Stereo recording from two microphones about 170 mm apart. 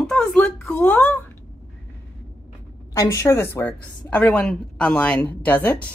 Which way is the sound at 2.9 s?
20° left (ahead or behind).